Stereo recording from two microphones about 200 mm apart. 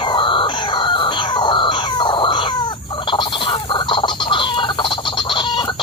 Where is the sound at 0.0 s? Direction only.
25° left (ahead or behind).